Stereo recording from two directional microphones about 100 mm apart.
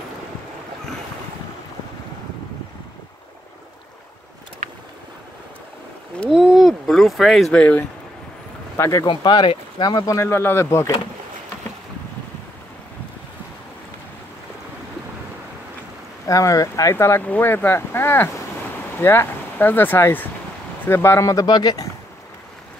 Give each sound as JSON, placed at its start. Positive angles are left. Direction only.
{"t": 6.3, "sound": "a sound", "side_deg": -5}
{"t": 7.5, "sound": "speech", "side_deg": 15}
{"t": 8.7, "sound": "speech", "side_deg": 30}
{"t": 9.0, "sound": "speech", "side_deg": 50}
{"t": 9.8, "sound": "speech", "side_deg": 40}
{"t": 16.3, "sound": "speech", "side_deg": 35}
{"t": 21.5, "sound": "speech", "side_deg": 45}